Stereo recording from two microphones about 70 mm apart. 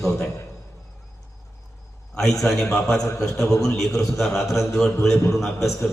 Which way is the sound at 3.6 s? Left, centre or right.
Centre.